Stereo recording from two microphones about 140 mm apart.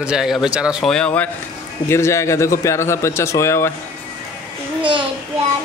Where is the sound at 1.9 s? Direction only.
20° left (ahead or behind).